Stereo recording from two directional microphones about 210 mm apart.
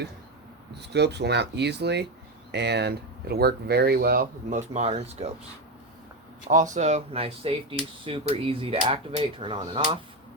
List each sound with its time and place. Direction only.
0.7 s speech: 55° right (ahead or behind); by 5.3 s 30° right (ahead or behind)
6.7 s speech: 35° right (ahead or behind)